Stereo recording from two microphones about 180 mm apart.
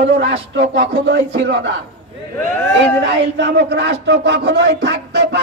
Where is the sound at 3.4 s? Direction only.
75° right (ahead or behind).